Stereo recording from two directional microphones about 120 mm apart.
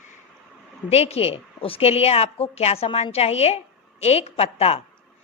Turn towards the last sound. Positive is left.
turn(degrees=55)  # may be behind; listen again after turning